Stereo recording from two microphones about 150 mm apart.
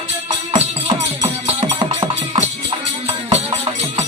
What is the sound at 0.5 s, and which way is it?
Music, 40° right (ahead or behind).